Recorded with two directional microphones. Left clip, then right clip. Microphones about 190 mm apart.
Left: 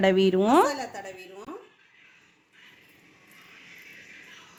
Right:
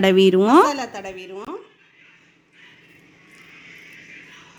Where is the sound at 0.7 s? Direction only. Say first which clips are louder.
Right 6 dB; 45° right (ahead or behind).